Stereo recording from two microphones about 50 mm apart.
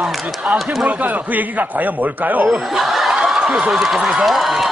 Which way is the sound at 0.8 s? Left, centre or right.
Right.